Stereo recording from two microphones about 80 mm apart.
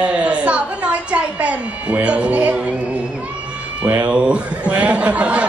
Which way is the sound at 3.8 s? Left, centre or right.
Right.